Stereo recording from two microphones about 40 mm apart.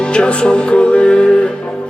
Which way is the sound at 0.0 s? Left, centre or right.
Left.